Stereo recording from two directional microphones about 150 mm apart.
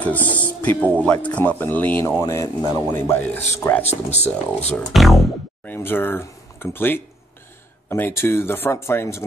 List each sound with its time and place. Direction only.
0.0 s speech: 10° left (ahead or behind)
3.8 s speech: 45° left (ahead or behind)
4.2 s speech: 10° left (ahead or behind)
5.7 s speech: 15° left (ahead or behind)